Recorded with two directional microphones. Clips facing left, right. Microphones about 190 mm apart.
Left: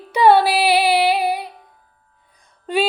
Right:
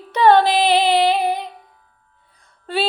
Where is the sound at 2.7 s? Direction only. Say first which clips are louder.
Left 3 dB; 15° left (ahead or behind).